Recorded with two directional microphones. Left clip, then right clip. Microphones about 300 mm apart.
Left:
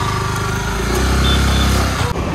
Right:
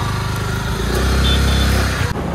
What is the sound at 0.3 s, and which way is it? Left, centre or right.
Vehicle, centre.